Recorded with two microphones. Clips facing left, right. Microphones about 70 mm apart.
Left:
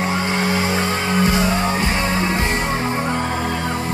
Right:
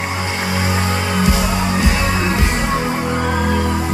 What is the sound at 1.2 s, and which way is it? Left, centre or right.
Music, left.